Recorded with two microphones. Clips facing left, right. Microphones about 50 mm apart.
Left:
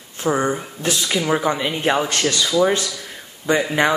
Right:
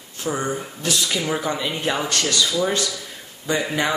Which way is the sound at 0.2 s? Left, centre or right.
Left.